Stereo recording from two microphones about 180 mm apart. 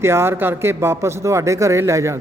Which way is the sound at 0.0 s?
15° right (ahead or behind).